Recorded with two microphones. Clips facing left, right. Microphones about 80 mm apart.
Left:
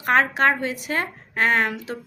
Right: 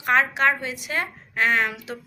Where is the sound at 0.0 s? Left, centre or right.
Left.